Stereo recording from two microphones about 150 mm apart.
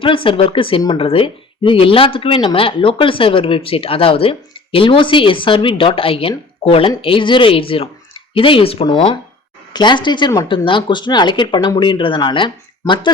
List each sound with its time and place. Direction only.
0.0 s speech: 35° left (ahead or behind)
9.7 s speech: 30° left (ahead or behind)